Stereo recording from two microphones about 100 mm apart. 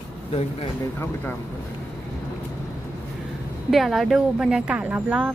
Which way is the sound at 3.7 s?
Centre (ahead or behind).